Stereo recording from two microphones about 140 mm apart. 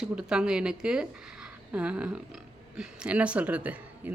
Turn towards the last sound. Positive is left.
turn(degrees=-10)  # may be behind; listen again after turning